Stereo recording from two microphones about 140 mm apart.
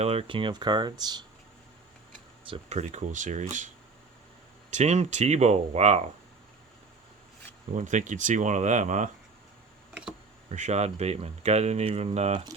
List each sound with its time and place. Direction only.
0.0 s speech: 45° right (ahead or behind); by 1.2 s 30° right (ahead or behind)
2.5 s speech: 50° right (ahead or behind)
4.7 s speech: 55° right (ahead or behind)
7.8 s speech: 60° right (ahead or behind)
9.9 s insect: 5° right (ahead or behind)
10.5 s speech: 55° right (ahead or behind)